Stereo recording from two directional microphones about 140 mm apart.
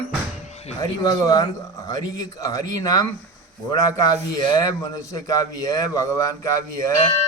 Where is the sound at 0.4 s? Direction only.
50° left (ahead or behind).